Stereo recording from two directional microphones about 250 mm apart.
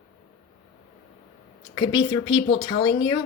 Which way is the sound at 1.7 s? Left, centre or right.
Centre.